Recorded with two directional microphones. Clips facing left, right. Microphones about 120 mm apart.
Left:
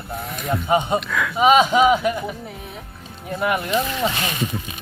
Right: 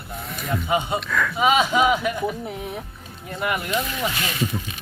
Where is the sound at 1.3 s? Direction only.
20° left (ahead or behind).